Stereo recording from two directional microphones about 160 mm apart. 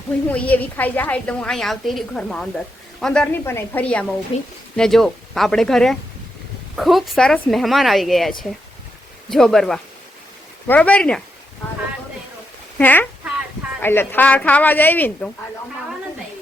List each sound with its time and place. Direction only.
0.3 s a woman's voice: 10° left (ahead or behind)
4.3 s speech: 35° left (ahead or behind)
4.8 s a woman's voice: centre (ahead or behind)
12.8 s a woman's voice: 10° left (ahead or behind)